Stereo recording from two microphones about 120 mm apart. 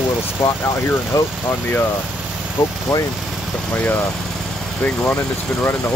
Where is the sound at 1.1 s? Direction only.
30° left (ahead or behind).